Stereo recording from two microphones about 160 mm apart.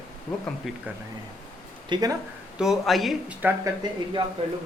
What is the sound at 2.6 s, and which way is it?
Speech, centre (ahead or behind).